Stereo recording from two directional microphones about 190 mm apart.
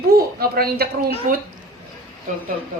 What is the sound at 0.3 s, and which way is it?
Speech, 55° right (ahead or behind).